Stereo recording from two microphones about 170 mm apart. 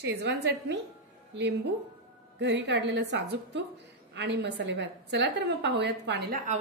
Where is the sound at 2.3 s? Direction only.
90° right.